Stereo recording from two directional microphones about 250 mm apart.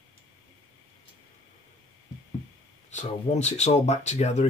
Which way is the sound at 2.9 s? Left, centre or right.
Left.